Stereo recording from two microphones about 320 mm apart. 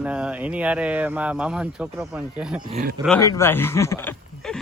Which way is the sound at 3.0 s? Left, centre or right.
Centre.